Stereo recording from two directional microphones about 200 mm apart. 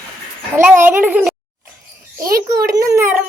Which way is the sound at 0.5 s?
10° right (ahead or behind).